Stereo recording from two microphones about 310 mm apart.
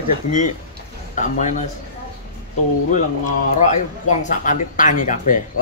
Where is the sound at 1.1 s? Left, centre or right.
Left.